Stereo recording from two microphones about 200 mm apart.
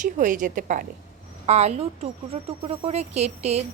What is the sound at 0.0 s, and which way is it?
A woman's voice, 40° right (ahead or behind).